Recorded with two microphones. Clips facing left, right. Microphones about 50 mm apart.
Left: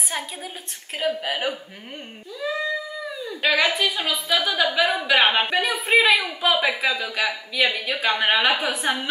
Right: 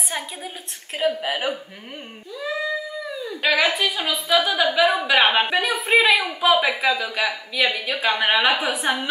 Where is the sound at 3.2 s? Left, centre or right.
Centre.